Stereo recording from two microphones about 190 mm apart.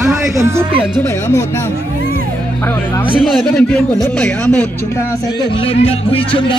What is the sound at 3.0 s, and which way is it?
Speech, centre (ahead or behind).